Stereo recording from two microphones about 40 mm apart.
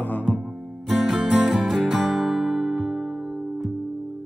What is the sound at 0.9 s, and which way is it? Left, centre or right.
Music, centre.